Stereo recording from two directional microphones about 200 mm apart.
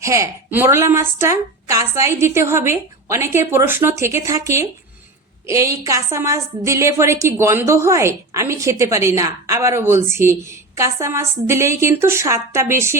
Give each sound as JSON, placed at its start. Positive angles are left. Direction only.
{"t": 0.0, "sound": "a woman's voice", "side_deg": -15}